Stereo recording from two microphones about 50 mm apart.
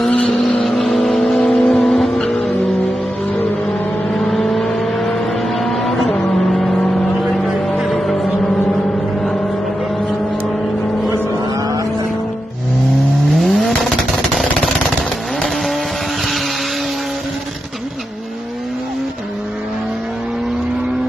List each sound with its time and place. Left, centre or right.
0.0 s vehicle: centre
0.3 s vehicle: centre
4.1 s vehicle: centre
7.6 s music: centre
13.3 s vehicle: centre
14.3 s a sound: centre